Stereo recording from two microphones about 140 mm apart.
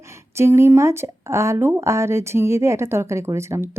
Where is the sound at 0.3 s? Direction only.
20° right (ahead or behind).